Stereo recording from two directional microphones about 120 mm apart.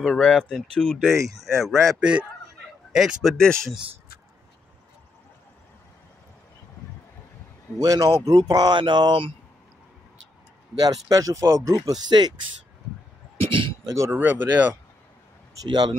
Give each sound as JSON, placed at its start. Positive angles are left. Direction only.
{"t": 0.0, "sound": "speech", "side_deg": 5}
{"t": 2.0, "sound": "speech", "side_deg": -10}
{"t": 7.8, "sound": "speech", "side_deg": -30}
{"t": 10.8, "sound": "speech", "side_deg": -30}
{"t": 13.5, "sound": "a sound", "side_deg": -45}
{"t": 14.1, "sound": "speech", "side_deg": -15}
{"t": 15.7, "sound": "speech", "side_deg": -40}